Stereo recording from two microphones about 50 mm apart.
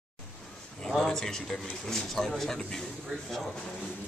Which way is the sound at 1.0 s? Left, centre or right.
Centre.